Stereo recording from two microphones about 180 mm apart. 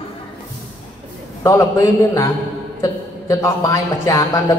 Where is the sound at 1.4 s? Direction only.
15° left (ahead or behind).